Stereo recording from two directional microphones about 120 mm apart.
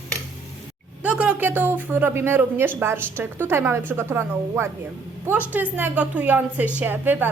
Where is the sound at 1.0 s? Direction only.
10° right (ahead or behind).